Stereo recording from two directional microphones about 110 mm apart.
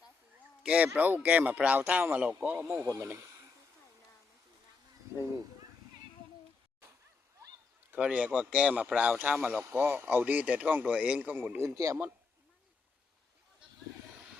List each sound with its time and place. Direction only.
0.6 s speech: 10° right (ahead or behind)
2.6 s speech: 25° right (ahead or behind)
7.9 s speech: 10° right (ahead or behind)
11.7 s speech: 30° right (ahead or behind)